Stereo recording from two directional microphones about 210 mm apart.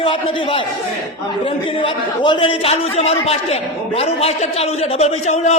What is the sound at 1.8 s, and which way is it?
A man's voice, 25° left (ahead or behind).